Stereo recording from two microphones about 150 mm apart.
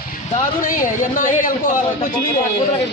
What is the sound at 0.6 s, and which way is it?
Speech, 60° left (ahead or behind).